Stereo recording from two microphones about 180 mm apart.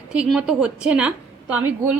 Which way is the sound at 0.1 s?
5° right (ahead or behind).